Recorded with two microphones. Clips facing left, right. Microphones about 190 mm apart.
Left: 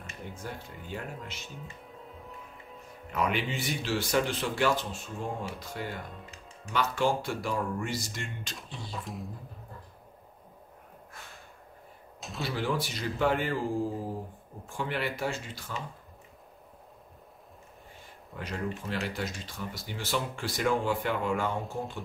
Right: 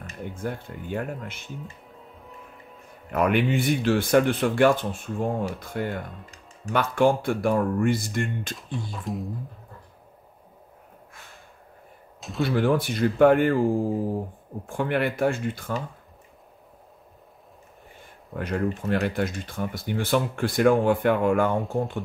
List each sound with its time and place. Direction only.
0.2 s speech: 55° right (ahead or behind)
3.1 s speech: 55° right (ahead or behind)
8.7 s speech: centre (ahead or behind)
12.4 s speech: 55° right (ahead or behind)
14.7 s speech: 55° right (ahead or behind)
18.3 s speech: 55° right (ahead or behind)